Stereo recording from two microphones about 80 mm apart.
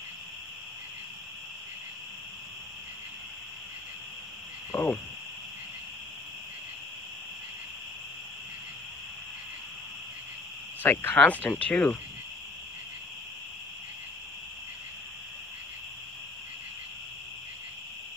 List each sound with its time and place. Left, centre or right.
4.7 s cricket: centre
10.8 s cricket: left
11.6 s speech: centre